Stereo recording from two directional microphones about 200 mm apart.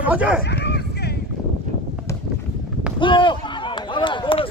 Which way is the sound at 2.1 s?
15° left (ahead or behind).